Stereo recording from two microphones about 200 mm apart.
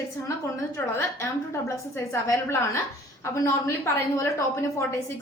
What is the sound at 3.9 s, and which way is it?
Speech, 15° left (ahead or behind).